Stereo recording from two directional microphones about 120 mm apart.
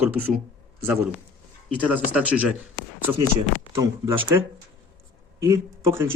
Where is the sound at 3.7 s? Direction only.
25° right (ahead or behind).